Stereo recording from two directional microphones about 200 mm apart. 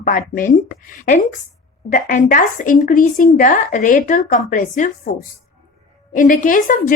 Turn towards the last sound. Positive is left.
turn(degrees=40)  # may be behind; listen again after turning